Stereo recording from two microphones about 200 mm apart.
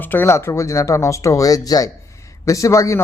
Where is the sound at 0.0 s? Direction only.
10° left (ahead or behind).